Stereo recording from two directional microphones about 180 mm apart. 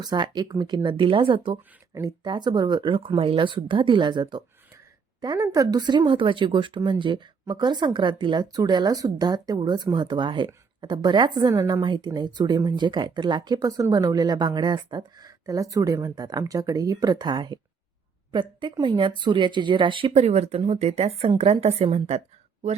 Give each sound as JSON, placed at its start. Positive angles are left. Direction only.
{"t": 0.0, "sound": "speech", "side_deg": -25}